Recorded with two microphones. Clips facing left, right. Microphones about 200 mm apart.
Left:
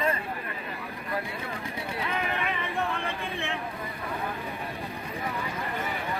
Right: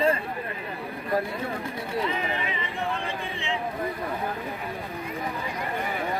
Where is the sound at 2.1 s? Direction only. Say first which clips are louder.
Right 1 dB; 60° left (ahead or behind).